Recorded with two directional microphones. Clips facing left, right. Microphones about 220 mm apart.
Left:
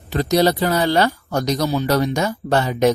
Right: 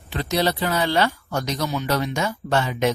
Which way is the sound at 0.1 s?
40° left (ahead or behind).